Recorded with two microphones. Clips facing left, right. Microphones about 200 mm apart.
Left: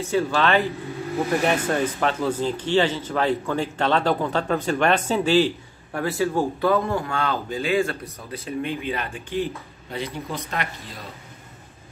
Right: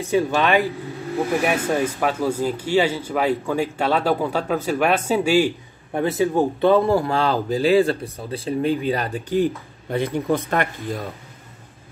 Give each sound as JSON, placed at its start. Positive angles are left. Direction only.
{"t": 0.0, "sound": "speech", "side_deg": -15}